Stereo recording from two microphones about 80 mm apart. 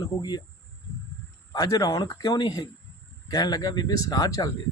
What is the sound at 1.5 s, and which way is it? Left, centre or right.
Speech, left.